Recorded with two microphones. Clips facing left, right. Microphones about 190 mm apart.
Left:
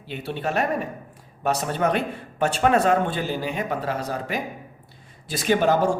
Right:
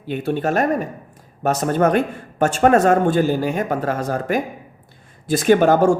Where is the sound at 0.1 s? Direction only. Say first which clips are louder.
Right 7 dB; 50° right (ahead or behind).